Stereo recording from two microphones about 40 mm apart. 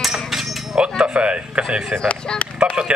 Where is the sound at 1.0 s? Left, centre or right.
Right.